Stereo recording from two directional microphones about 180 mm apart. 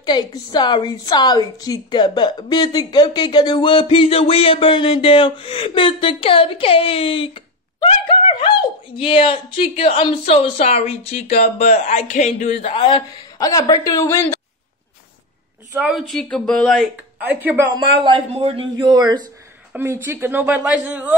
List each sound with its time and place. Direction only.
0.0 s a woman's voice: 25° left (ahead or behind)
15.8 s a woman's voice: centre (ahead or behind)
17.2 s a man's voice: 10° right (ahead or behind)
18.0 s speech: 30° right (ahead or behind)
19.7 s a man's voice: 10° right (ahead or behind)